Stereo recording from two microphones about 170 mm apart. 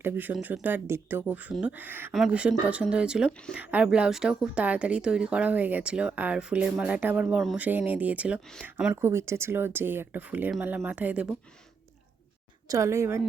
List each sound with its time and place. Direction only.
0.0 s speech: 10° right (ahead or behind)
12.6 s speech: 20° right (ahead or behind)